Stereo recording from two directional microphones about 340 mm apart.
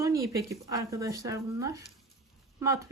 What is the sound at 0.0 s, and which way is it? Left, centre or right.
A woman's voice, centre.